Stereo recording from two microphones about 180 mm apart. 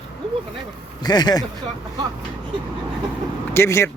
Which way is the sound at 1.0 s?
20° left (ahead or behind).